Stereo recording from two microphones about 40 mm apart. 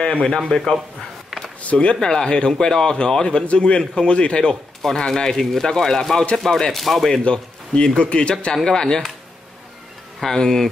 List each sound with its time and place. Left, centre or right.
0.0 s a man's voice: left
1.6 s speech: left
2.0 s a man's voice: centre
4.9 s speech: centre
7.2 s a man's voice: left
10.2 s speech: centre